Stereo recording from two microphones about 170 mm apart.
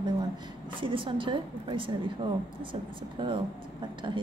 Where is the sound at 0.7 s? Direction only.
30° right (ahead or behind).